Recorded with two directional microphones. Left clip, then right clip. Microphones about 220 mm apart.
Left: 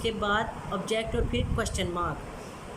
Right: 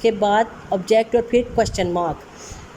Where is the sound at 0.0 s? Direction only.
20° right (ahead or behind).